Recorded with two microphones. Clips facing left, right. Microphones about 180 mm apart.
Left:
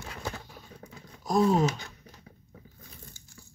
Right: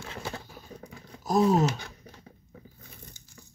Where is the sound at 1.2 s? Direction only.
5° right (ahead or behind).